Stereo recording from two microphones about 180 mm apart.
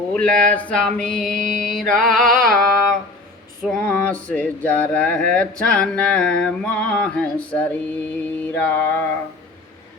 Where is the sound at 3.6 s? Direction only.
5° left (ahead or behind).